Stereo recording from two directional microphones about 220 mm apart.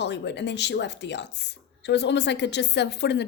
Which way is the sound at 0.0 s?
50° left (ahead or behind).